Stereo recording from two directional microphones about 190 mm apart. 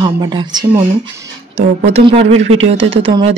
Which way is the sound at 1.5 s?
35° right (ahead or behind).